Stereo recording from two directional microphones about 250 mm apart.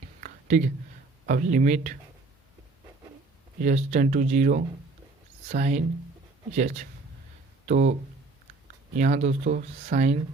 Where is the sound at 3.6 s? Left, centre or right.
Right.